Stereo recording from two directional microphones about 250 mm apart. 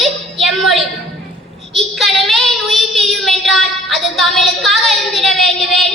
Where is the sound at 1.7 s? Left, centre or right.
Centre.